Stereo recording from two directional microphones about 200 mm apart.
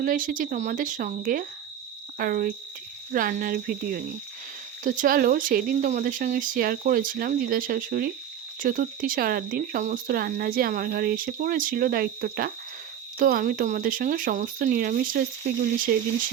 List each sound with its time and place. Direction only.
0.0 s speech: 45° right (ahead or behind)